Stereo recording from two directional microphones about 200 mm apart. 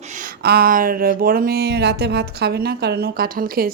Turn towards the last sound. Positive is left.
turn(degrees=-45)  # may be behind; listen again after turning